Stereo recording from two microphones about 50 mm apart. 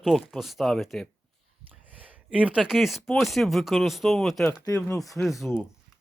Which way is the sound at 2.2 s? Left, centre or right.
Right.